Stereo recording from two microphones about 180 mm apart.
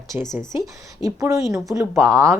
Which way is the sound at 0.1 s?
5° right (ahead or behind).